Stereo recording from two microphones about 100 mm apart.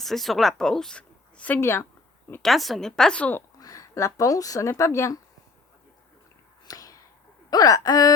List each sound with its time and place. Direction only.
0.0 s speech: centre (ahead or behind); by 1.9 s 25° left (ahead or behind)
2.4 s a woman's voice: centre (ahead or behind)
3.6 s speech: 35° left (ahead or behind)
6.7 s a sound: 35° left (ahead or behind)
7.5 s speech: 40° left (ahead or behind)